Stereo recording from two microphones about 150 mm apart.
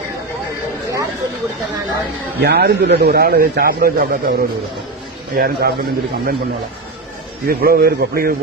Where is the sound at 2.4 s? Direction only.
90° right.